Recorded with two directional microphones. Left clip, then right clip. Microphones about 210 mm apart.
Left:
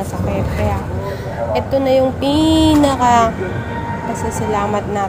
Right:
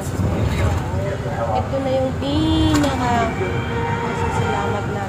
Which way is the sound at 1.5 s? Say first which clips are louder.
Left 8 dB; 35° left (ahead or behind).